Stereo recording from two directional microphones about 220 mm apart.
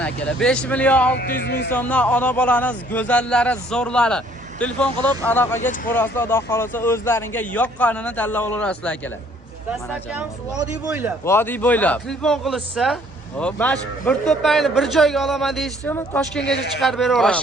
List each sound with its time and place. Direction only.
0.0 s a man's voice: 5° left (ahead or behind)
1.5 s speech: 45° left (ahead or behind)
1.7 s a man's voice: 5° left (ahead or behind)
9.6 s speech: 5° right (ahead or behind)
11.3 s a man's voice: 10° left (ahead or behind)
16.4 s speech: 50° left (ahead or behind)
16.7 s a man's voice: centre (ahead or behind)